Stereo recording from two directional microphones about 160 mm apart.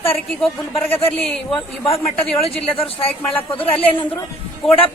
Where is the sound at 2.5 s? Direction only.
35° left (ahead or behind).